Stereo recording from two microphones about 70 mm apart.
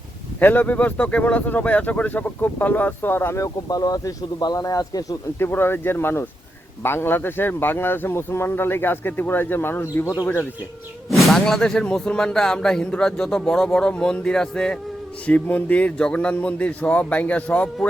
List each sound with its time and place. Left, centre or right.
0.3 s speech: left
3.3 s speech: left
5.4 s speech: left
11.1 s speech: centre
15.3 s speech: left